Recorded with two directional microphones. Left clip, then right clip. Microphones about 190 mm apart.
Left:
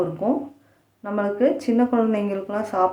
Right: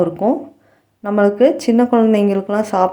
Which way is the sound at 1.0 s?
35° right (ahead or behind).